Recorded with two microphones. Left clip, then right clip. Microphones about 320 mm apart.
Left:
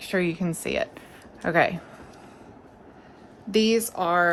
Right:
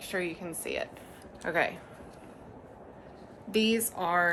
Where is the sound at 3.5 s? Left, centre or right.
Left.